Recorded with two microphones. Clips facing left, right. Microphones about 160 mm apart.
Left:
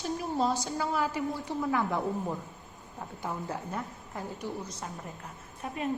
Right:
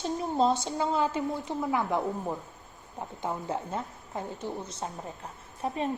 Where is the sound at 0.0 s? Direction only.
25° right (ahead or behind).